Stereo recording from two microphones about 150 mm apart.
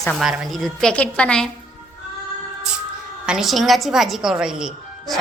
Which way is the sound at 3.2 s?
5° right (ahead or behind).